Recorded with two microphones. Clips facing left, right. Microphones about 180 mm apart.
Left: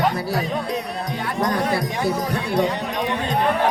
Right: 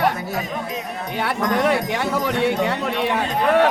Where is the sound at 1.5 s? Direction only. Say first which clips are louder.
Right 3 dB; 80° right.